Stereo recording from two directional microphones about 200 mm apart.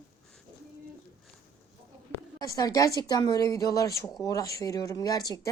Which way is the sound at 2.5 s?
15° left (ahead or behind).